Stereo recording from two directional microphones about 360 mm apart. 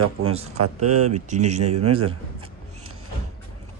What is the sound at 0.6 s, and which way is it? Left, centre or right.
Speech, right.